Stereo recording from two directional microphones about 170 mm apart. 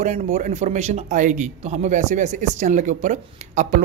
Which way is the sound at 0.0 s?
45° right (ahead or behind).